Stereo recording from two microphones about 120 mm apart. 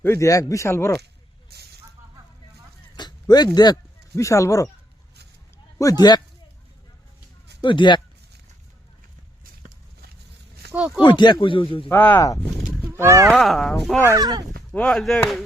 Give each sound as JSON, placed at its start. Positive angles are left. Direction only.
{"t": 0.0, "sound": "a man's voice", "side_deg": 25}
{"t": 2.9, "sound": "a sound", "side_deg": 35}
{"t": 5.8, "sound": "speech", "side_deg": 30}
{"t": 7.6, "sound": "speech", "side_deg": 40}
{"t": 10.8, "sound": "speech", "side_deg": -10}
{"t": 11.0, "sound": "speech", "side_deg": 40}
{"t": 11.9, "sound": "speech", "side_deg": 15}
{"t": 12.9, "sound": "speech", "side_deg": -20}
{"t": 13.3, "sound": "speech", "side_deg": 0}
{"t": 14.0, "sound": "speech", "side_deg": -30}
{"t": 14.7, "sound": "speech", "side_deg": 10}